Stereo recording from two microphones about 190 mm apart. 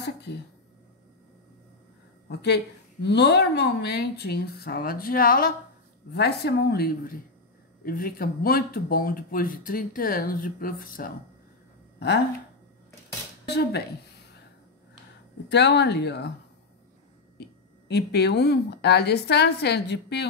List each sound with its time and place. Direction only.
0.0 s a sound: 60° left (ahead or behind)
2.2 s a woman's voice: 65° left (ahead or behind)
13.5 s a woman's voice: 60° left (ahead or behind)
15.5 s a woman's voice: 65° left (ahead or behind)
17.4 s a woman's voice: 60° left (ahead or behind)